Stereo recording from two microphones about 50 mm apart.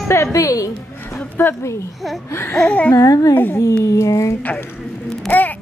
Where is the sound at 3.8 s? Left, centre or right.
Left.